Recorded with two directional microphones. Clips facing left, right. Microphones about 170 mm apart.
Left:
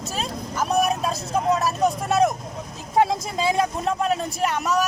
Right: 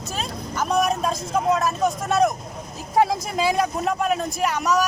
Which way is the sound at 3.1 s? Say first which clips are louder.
Right 1 dB; 25° left (ahead or behind).